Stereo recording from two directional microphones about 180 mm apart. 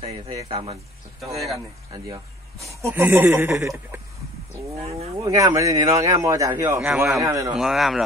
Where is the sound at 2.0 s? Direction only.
15° right (ahead or behind).